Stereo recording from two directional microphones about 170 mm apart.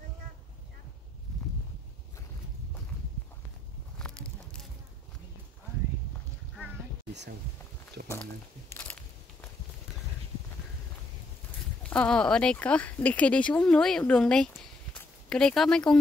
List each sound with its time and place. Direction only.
4.0 s a sound: 5° left (ahead or behind)
8.0 s speech: 70° right (ahead or behind)
11.8 s speech: 5° left (ahead or behind)